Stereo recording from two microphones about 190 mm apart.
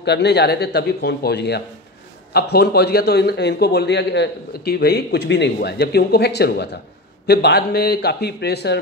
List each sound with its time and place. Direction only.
0.0 s a man's voice: 65° left (ahead or behind)